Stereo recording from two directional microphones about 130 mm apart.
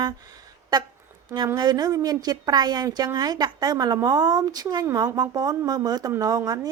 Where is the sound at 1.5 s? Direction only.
30° right (ahead or behind).